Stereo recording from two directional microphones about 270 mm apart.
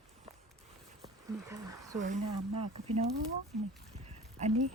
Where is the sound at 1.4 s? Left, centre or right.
Centre.